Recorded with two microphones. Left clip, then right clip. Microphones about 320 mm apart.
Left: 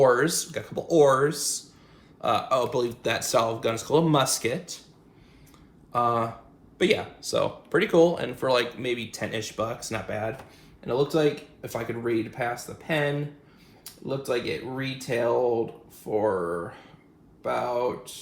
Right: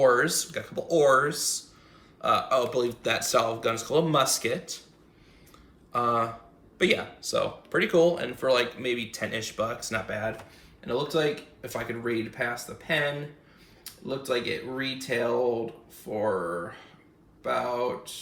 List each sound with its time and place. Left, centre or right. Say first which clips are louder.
0.0 s speech: left 1 dB; centre
5.9 s speech: left 1 dB; centre
17.4 s speech: left 1 dB; centre